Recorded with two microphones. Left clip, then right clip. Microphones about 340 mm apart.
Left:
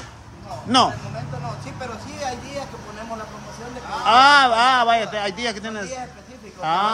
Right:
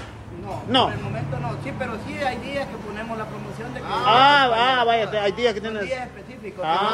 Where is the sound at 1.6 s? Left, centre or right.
Centre.